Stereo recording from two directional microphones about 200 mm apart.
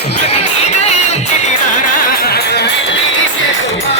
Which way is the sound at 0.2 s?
35° left (ahead or behind).